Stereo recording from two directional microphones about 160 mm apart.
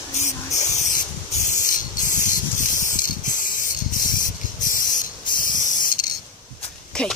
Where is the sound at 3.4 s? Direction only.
55° left (ahead or behind).